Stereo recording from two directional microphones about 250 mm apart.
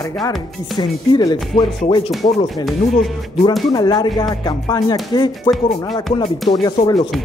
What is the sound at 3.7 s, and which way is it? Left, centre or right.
Speech, centre.